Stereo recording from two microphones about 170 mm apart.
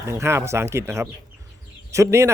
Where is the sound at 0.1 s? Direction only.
15° right (ahead or behind).